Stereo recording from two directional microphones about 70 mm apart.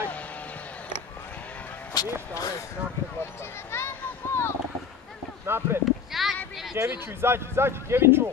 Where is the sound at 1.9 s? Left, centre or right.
Left.